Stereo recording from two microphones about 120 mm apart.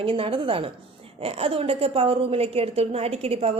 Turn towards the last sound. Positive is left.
turn(degrees=-60)  # may be behind; listen again after turning